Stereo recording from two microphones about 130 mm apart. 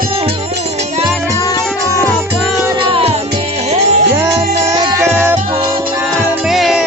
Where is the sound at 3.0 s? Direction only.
50° right (ahead or behind).